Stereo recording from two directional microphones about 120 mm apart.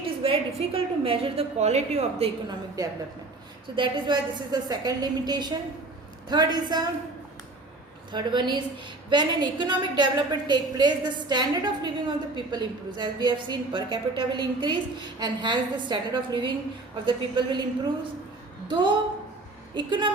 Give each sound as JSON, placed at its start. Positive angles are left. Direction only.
{"t": 0.0, "sound": "a woman's voice", "side_deg": -50}
{"t": 2.5, "sound": "a woman's voice", "side_deg": -30}
{"t": 8.1, "sound": "a woman's voice", "side_deg": -40}
{"t": 18.7, "sound": "a woman's voice", "side_deg": -40}